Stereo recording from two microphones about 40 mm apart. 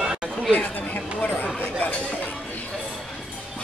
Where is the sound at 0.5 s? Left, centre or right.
Left.